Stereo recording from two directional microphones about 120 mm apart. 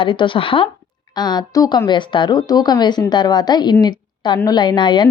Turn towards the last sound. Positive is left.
turn(degrees=40)  # may be behind; listen again after turning